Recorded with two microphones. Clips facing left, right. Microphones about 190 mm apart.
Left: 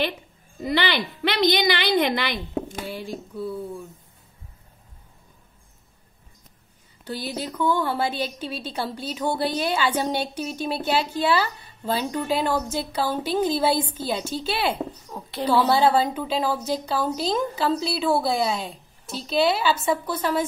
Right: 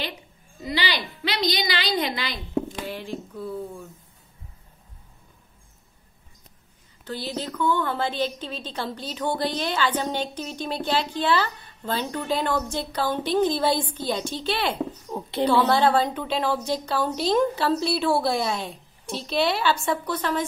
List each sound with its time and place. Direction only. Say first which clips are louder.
0.6 s a woman's voice: left 4 dB; 55° left (ahead or behind)
7.1 s a woman's voice: even; 10° left (ahead or behind)
15.0 s a woman's voice: right 5 dB; 20° right (ahead or behind)
15.7 s a woman's voice: left 1 dB; 5° left (ahead or behind)